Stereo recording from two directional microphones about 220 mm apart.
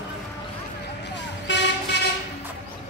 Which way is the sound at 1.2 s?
55° left (ahead or behind).